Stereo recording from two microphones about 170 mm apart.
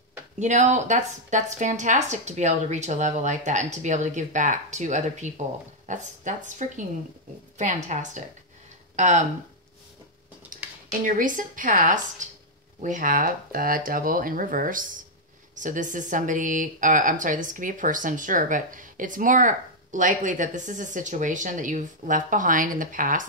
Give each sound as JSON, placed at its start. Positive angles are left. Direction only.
{"t": 0.4, "sound": "speech", "side_deg": -45}
{"t": 11.1, "sound": "speech", "side_deg": -50}